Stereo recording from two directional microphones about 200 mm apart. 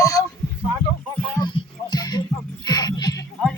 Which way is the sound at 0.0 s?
15° left (ahead or behind).